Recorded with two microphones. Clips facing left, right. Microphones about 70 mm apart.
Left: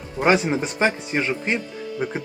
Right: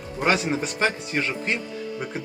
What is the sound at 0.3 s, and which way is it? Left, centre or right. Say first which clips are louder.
Speech: left 4 dB; left.